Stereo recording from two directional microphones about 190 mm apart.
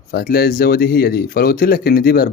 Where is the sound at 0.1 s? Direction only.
55° left (ahead or behind).